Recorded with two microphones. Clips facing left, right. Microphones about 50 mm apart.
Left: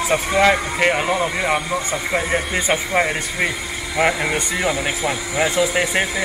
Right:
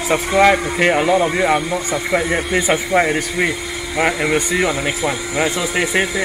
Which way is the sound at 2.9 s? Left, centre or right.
Right.